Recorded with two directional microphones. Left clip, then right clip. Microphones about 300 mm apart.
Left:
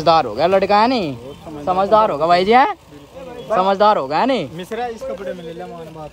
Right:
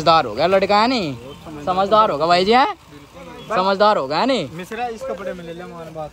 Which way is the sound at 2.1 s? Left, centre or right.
Right.